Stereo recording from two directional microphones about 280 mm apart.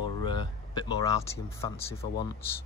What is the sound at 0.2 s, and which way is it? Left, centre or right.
Speech, centre.